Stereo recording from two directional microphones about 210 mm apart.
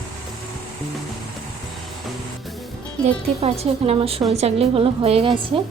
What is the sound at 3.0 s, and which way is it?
A woman's voice, 30° right (ahead or behind).